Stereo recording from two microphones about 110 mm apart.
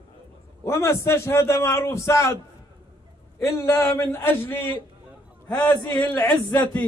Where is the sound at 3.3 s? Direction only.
25° left (ahead or behind).